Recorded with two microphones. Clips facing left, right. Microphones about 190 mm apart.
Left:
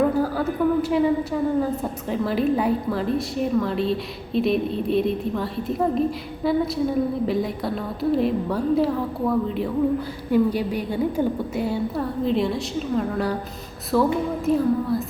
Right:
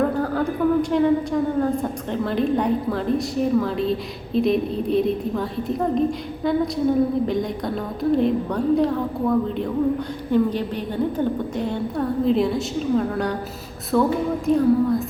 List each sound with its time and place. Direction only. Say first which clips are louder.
0.0 s a woman's voice: even; 5° left (ahead or behind)